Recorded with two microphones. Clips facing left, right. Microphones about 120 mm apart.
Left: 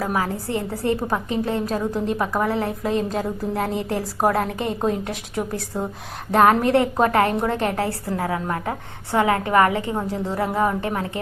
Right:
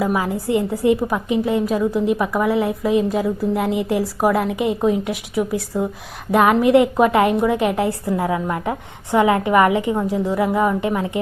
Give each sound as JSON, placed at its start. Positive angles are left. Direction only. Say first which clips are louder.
{"t": 0.0, "sound": "a woman's voice", "louder": "right 4 dB", "side_deg": -15}